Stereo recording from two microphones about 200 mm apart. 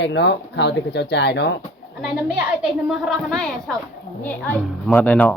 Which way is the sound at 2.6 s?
Centre (ahead or behind).